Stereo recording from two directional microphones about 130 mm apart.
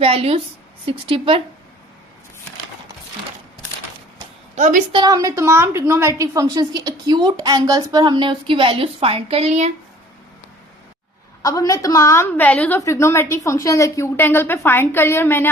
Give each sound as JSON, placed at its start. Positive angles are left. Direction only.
{"t": 0.0, "sound": "a woman's voice", "side_deg": -50}
{"t": 4.5, "sound": "a woman's voice", "side_deg": -75}
{"t": 5.0, "sound": "a woman's voice", "side_deg": -25}
{"t": 11.4, "sound": "a woman's voice", "side_deg": 25}